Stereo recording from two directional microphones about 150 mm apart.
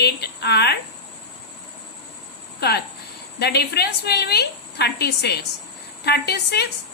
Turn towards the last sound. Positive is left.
turn(degrees=90)